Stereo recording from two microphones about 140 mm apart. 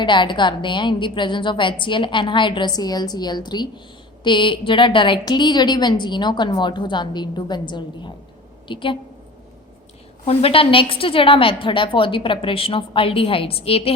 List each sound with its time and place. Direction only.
0.0 s a woman's voice: 35° left (ahead or behind)
10.2 s a woman's voice: 40° left (ahead or behind)